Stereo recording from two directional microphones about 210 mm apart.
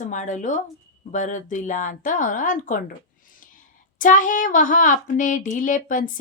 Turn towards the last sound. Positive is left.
turn(degrees=40)  # may be behind; listen again after turning